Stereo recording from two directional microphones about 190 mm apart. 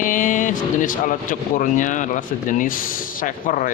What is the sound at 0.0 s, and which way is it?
Speech, 45° left (ahead or behind).